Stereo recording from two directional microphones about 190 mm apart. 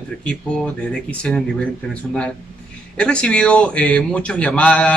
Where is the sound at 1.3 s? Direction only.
5° left (ahead or behind).